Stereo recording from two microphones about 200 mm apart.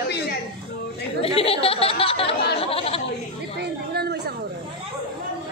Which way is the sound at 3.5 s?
55° right (ahead or behind).